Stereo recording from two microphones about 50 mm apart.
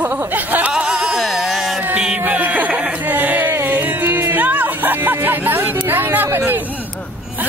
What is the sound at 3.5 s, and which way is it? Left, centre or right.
Music, right.